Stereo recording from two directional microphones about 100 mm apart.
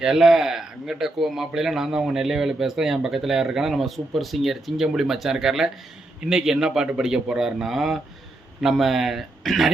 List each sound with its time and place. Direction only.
0.0 s speech: 5° right (ahead or behind)